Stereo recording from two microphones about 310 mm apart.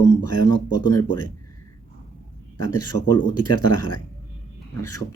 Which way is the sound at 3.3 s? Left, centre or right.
Left.